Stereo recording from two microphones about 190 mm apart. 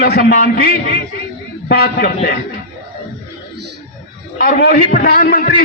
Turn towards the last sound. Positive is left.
turn(degrees=55)  # may be behind; listen again after turning